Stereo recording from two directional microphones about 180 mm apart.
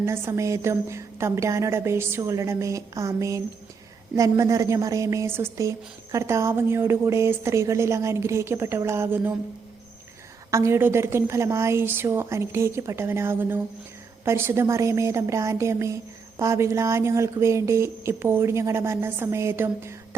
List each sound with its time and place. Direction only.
0.0 s a woman's voice: 15° right (ahead or behind)
10.5 s a woman's voice: 15° right (ahead or behind)